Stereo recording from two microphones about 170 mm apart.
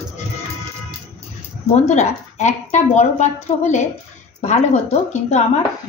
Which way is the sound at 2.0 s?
45° left (ahead or behind).